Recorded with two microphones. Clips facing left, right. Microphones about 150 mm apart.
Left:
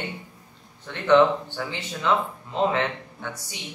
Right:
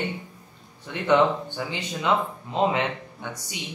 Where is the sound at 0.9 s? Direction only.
15° right (ahead or behind).